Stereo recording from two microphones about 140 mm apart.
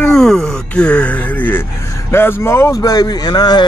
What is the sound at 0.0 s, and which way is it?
Speech, 5° left (ahead or behind).